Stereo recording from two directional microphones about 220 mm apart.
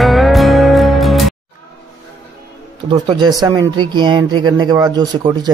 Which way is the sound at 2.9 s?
25° right (ahead or behind).